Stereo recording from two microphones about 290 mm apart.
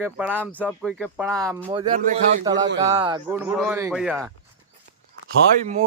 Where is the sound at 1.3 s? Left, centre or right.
Centre.